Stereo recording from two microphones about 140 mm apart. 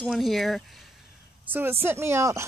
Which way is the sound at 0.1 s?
Centre (ahead or behind).